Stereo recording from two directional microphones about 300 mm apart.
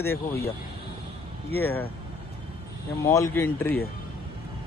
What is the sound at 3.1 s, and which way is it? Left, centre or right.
Speech, centre.